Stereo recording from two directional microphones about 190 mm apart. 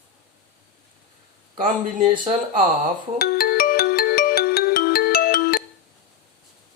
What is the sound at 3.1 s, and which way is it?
Music, 55° left (ahead or behind).